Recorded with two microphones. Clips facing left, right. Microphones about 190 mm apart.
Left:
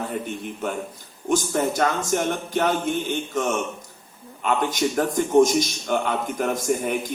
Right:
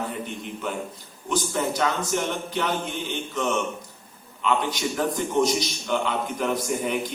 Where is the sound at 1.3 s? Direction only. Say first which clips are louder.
Left 4 dB; 50° left (ahead or behind).